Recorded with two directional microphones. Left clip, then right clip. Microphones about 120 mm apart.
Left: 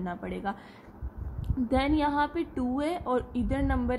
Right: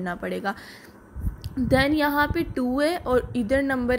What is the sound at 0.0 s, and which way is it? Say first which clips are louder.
Speech: right 6 dB; 45° right (ahead or behind).